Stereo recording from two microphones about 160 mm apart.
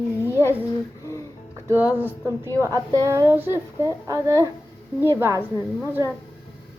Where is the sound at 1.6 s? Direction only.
10° right (ahead or behind).